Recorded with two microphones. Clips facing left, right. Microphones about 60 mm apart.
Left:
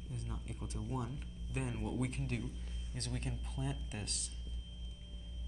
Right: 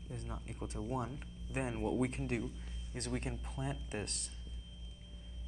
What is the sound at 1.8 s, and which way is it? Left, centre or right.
Speech, centre.